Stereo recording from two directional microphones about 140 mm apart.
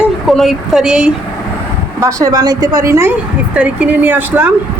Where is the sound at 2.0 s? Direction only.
25° right (ahead or behind).